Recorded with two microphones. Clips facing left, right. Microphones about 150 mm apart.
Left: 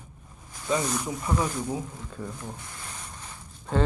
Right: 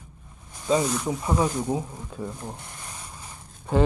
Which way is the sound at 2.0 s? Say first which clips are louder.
Right 3 dB; 15° right (ahead or behind).